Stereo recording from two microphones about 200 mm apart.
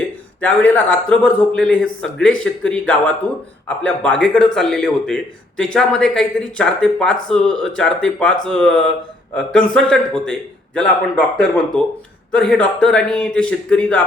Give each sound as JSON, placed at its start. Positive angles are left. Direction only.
{"t": 0.4, "sound": "a man's voice", "side_deg": 5}
{"t": 11.3, "sound": "speech", "side_deg": 5}